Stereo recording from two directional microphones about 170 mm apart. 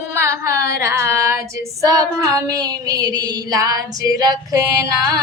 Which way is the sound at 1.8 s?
20° right (ahead or behind).